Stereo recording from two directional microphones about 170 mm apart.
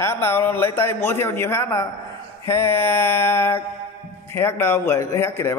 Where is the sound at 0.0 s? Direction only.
15° left (ahead or behind).